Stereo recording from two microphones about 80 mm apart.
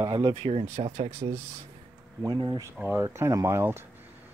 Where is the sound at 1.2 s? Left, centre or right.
Right.